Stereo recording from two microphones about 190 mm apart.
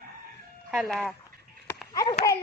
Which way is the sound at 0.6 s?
Centre (ahead or behind).